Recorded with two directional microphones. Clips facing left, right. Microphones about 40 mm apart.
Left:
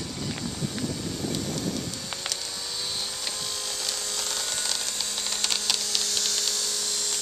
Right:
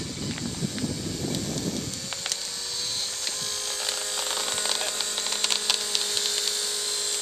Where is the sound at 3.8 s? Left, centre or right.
Centre.